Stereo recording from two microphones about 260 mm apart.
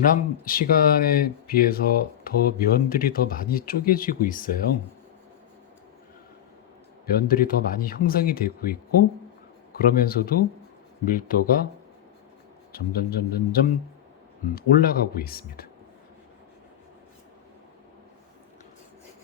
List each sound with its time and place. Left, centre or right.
0.0 s speech: left
7.1 s speech: left
12.7 s speech: left